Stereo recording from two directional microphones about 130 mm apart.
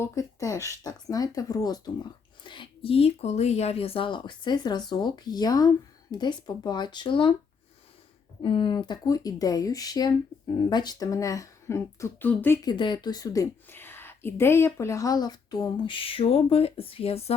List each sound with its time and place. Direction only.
0.0 s speech: 25° left (ahead or behind); by 7.3 s 40° left (ahead or behind)
8.4 s speech: 40° left (ahead or behind); by 12.5 s 15° left (ahead or behind)
12.6 s speech: 35° left (ahead or behind)
13.7 s speech: 15° left (ahead or behind); by 17.3 s 50° left (ahead or behind)